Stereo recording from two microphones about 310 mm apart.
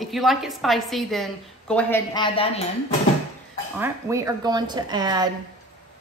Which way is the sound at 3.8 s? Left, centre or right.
Centre.